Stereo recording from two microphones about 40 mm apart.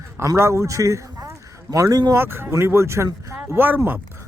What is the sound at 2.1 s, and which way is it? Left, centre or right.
Speech, right.